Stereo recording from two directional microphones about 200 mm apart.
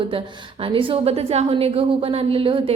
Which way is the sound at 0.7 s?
30° right (ahead or behind).